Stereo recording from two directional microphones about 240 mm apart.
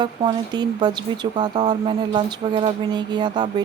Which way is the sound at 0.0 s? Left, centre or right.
Centre.